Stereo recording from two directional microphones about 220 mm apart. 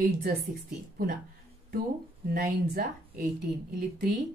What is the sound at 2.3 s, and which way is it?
Speech, 45° right (ahead or behind).